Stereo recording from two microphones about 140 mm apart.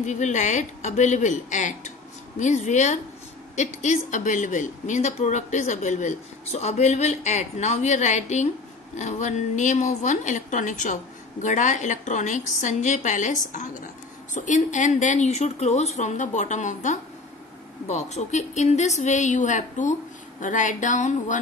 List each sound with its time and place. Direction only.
0.0 s speech: 60° left (ahead or behind)